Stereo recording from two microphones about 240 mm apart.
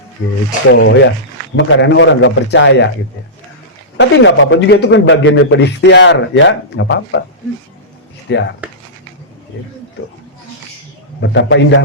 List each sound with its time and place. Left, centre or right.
0.7 s a man's voice: left
3.9 s a man's voice: left
8.3 s a man's voice: left
11.2 s a man's voice: left